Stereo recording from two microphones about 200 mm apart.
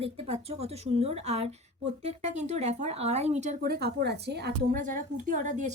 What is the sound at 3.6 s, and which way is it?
Speech, 50° right (ahead or behind).